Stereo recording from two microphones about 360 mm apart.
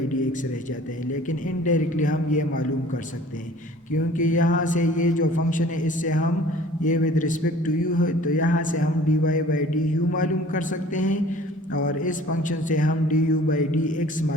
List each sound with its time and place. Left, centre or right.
1.3 s a man's voice: left
4.2 s a man's voice: left